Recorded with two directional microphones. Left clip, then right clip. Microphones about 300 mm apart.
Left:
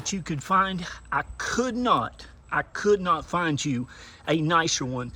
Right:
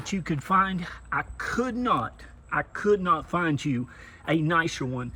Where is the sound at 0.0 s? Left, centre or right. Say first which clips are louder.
Even; centre.